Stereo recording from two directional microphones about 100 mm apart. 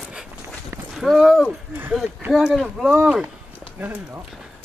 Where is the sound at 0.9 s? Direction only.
Centre (ahead or behind).